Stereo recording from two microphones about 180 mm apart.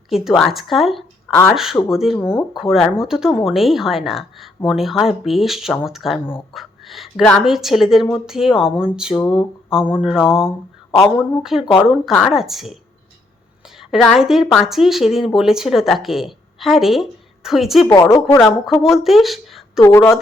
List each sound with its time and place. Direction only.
0.1 s a woman's voice: centre (ahead or behind)
17.9 s a woman's voice: 15° left (ahead or behind)
18.3 s a woman's voice: centre (ahead or behind)
19.8 s a woman's voice: 15° left (ahead or behind)